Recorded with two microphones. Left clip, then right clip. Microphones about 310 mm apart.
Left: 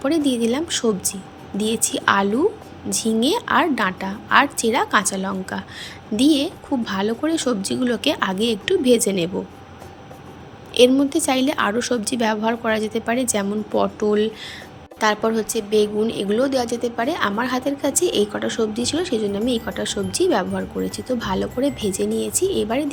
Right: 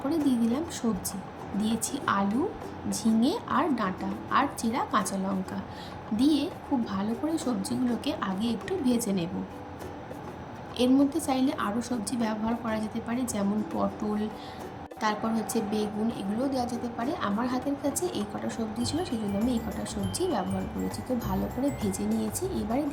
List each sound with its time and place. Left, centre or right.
0.1 s a woman's voice: centre
10.8 s a woman's voice: centre